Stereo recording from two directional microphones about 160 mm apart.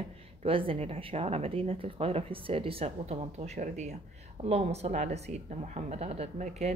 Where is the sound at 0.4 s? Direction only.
35° right (ahead or behind).